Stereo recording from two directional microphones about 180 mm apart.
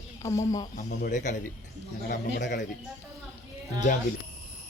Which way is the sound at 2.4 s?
45° left (ahead or behind).